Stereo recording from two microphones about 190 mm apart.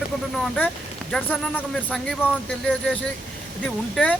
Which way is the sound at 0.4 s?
5° left (ahead or behind).